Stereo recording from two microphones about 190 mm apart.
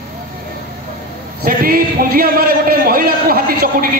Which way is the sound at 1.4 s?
50° right (ahead or behind).